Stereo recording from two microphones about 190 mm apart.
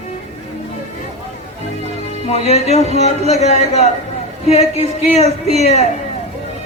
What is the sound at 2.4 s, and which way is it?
Speech, 35° left (ahead or behind).